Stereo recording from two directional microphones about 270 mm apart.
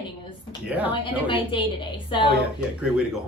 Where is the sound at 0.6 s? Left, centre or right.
Centre.